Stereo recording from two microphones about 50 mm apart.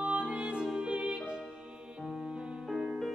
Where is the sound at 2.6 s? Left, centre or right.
Centre.